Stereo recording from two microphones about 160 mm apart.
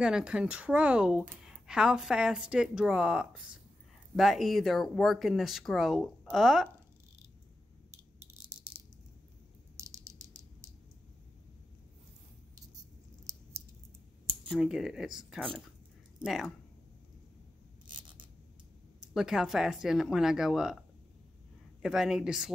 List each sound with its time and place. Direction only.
0.0 s speech: 5° right (ahead or behind)
9.8 s a sound: 20° right (ahead or behind)
14.5 s speech: centre (ahead or behind)
17.8 s zipper: 30° right (ahead or behind)
19.1 s speech: centre (ahead or behind)
21.8 s speech: 5° right (ahead or behind)